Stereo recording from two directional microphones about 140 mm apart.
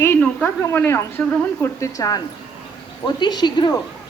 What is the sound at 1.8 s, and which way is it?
A woman's voice, 25° left (ahead or behind).